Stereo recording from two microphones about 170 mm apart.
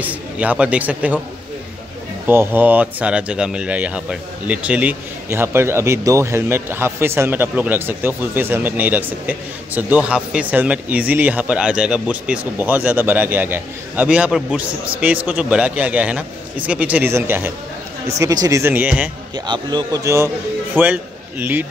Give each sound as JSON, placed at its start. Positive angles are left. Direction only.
{"t": 0.0, "sound": "speech", "side_deg": -10}
{"t": 2.2, "sound": "speech", "side_deg": -10}
{"t": 19.3, "sound": "a man's voice", "side_deg": -25}